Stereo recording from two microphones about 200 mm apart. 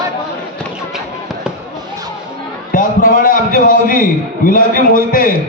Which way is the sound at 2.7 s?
40° left (ahead or behind).